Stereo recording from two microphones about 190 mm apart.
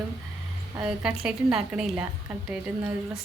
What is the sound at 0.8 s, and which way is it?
A woman's voice, 5° right (ahead or behind).